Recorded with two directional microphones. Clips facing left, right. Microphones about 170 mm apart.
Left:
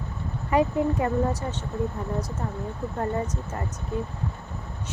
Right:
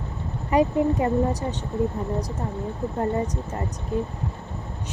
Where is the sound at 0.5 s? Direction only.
20° right (ahead or behind).